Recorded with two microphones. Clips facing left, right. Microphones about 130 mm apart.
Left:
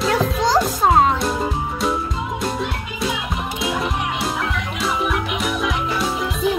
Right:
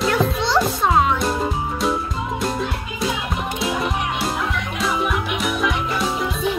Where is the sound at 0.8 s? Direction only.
35° left (ahead or behind).